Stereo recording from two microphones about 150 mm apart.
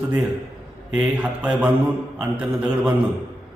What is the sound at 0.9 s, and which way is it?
A man's voice, 10° right (ahead or behind).